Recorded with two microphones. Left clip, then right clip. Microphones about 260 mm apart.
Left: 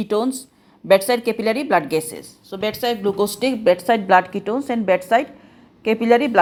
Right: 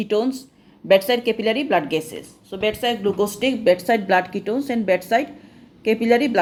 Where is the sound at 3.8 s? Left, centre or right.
Centre.